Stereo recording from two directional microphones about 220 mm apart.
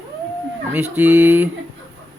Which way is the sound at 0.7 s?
10° right (ahead or behind).